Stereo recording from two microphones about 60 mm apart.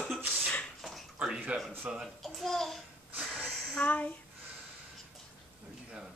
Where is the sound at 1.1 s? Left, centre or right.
Centre.